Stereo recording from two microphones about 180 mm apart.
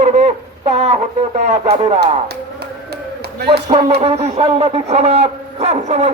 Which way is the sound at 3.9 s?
35° right (ahead or behind).